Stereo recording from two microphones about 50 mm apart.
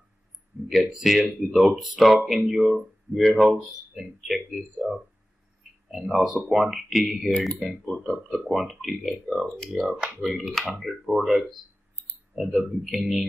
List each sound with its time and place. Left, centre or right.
0.5 s a sound: right
0.8 s speech: centre
5.9 s speech: centre
9.8 s speech: right
10.2 s speech: centre